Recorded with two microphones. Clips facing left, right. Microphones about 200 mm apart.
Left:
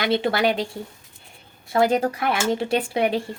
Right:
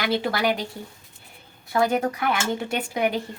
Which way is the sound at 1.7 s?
30° left (ahead or behind).